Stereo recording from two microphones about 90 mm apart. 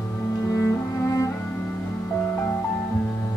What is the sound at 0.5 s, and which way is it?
Cello, 35° left (ahead or behind).